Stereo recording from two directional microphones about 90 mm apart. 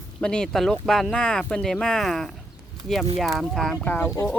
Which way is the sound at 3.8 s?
20° left (ahead or behind).